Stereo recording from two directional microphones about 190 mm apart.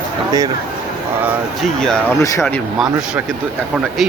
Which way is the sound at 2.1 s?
15° left (ahead or behind).